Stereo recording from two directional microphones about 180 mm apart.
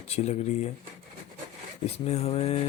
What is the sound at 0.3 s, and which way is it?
Speech, 40° left (ahead or behind).